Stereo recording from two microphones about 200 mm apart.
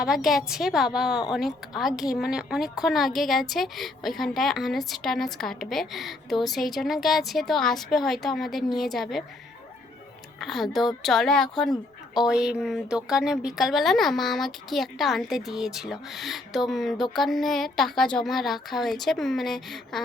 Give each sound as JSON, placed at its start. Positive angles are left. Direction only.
{"t": 0.0, "sound": "speech", "side_deg": 0}
{"t": 10.4, "sound": "speech", "side_deg": 0}
{"t": 11.7, "sound": "a sound", "side_deg": 20}
{"t": 12.3, "sound": "speech", "side_deg": -5}